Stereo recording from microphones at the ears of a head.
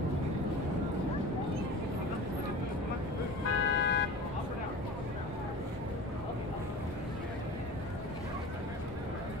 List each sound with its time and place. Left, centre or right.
3.4 s vehicle: left